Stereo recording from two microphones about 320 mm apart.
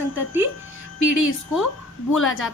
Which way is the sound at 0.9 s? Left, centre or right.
Left.